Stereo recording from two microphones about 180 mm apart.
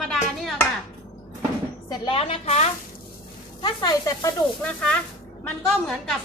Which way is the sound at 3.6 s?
20° left (ahead or behind).